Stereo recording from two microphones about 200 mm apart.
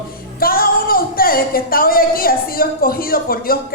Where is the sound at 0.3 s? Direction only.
45° left (ahead or behind).